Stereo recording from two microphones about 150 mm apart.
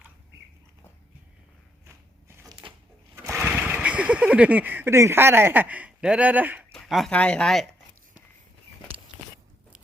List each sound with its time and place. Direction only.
2.2 s a sound: 20° right (ahead or behind)
3.4 s speech: 10° right (ahead or behind)
6.7 s speech: centre (ahead or behind)